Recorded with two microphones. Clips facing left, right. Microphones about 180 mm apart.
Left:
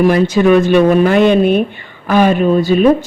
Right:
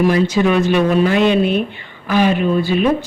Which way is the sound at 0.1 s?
50° left (ahead or behind).